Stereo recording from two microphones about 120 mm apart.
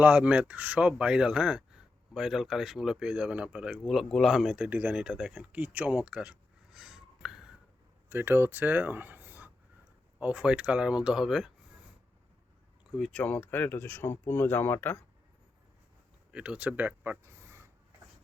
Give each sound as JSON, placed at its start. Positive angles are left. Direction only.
{"t": 0.0, "sound": "speech", "side_deg": -10}
{"t": 8.1, "sound": "speech", "side_deg": -20}
{"t": 13.0, "sound": "speech", "side_deg": 10}
{"t": 16.3, "sound": "speech", "side_deg": -10}